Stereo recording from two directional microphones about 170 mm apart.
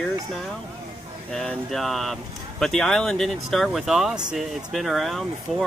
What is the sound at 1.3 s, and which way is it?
Speech, centre (ahead or behind).